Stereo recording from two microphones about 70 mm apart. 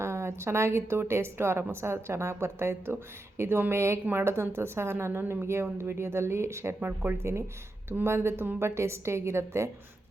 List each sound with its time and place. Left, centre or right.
0.0 s a woman's voice: right
6.8 s a woman's voice: right